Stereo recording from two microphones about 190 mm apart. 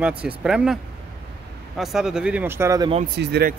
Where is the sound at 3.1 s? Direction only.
60° right (ahead or behind).